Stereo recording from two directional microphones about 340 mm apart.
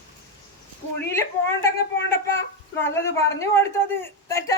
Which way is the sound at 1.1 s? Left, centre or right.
Centre.